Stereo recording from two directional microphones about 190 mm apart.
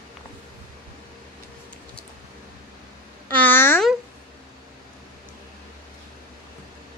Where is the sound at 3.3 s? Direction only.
10° left (ahead or behind).